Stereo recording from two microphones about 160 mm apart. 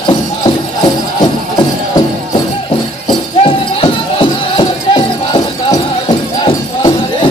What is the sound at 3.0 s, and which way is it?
Music, 35° left (ahead or behind).